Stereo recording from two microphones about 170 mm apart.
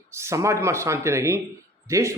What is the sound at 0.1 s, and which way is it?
Speech, 15° right (ahead or behind).